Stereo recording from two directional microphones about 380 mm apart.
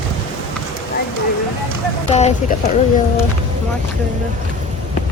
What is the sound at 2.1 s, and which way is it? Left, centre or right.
Speech, centre.